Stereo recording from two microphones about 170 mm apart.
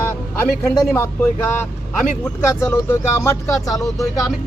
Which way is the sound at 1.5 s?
10° left (ahead or behind).